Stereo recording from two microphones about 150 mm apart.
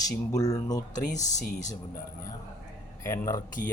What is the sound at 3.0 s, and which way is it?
Speech, 20° left (ahead or behind).